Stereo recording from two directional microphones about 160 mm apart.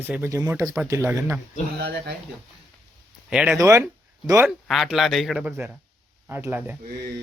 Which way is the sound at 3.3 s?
5° right (ahead or behind).